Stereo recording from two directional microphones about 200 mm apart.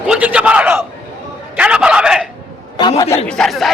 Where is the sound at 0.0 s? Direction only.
5° right (ahead or behind).